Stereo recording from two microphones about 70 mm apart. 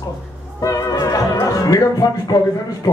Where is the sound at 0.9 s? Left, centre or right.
Left.